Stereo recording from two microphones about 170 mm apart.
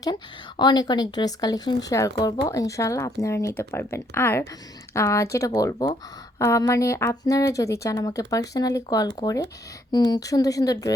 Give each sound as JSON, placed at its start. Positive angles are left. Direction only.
{"t": 0.5, "sound": "speech", "side_deg": 25}